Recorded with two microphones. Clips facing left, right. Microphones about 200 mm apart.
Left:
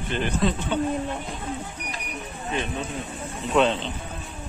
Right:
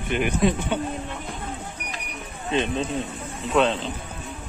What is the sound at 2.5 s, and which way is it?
Speech, 20° right (ahead or behind).